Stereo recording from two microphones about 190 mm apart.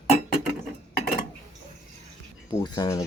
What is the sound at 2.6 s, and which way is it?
Speech, 20° left (ahead or behind).